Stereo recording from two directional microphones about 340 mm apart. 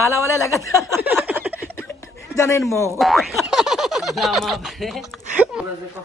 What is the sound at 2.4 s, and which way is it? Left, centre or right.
Speech, centre.